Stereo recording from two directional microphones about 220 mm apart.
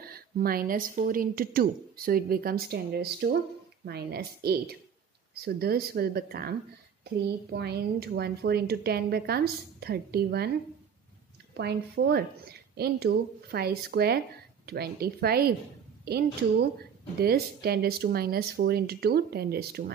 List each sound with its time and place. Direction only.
0.0 s a woman's voice: 45° right (ahead or behind)
11.5 s a woman's voice: 50° right (ahead or behind)
17.2 s a woman's voice: 45° right (ahead or behind)